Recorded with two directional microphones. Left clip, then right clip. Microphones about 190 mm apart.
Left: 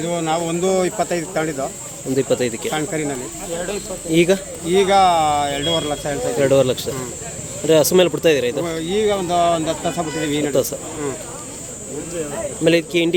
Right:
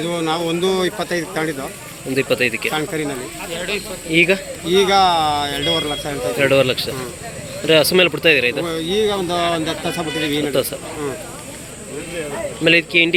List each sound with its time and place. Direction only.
0.0 s speech: 25° left (ahead or behind)
12.6 s speech: 15° left (ahead or behind)